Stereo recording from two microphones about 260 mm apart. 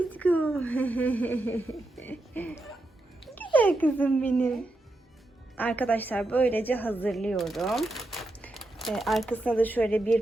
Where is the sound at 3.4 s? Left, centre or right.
Centre.